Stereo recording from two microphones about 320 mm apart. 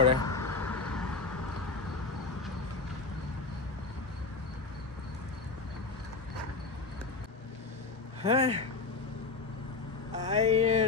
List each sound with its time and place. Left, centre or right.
0.2 s vehicle: centre
8.2 s speech: centre
10.1 s a sound: right